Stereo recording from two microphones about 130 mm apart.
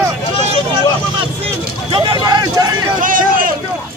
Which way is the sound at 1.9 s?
35° right (ahead or behind).